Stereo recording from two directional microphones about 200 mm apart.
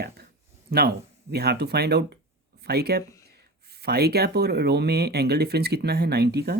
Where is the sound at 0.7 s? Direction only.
55° right (ahead or behind).